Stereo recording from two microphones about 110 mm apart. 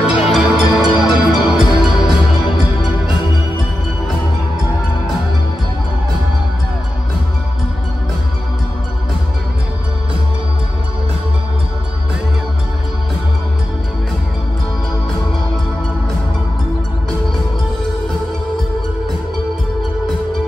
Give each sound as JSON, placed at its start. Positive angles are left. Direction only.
{"t": 0.2, "sound": "music", "side_deg": -5}